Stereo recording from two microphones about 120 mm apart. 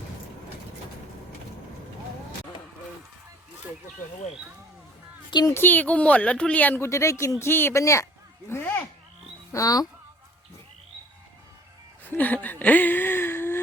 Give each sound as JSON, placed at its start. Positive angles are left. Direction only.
{"t": 5.3, "sound": "speech", "side_deg": 35}
{"t": 5.5, "sound": "speech", "side_deg": 15}
{"t": 9.5, "sound": "speech", "side_deg": 30}
{"t": 12.1, "sound": "speech", "side_deg": 15}